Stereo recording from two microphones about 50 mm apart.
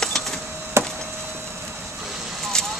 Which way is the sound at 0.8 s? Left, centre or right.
Right.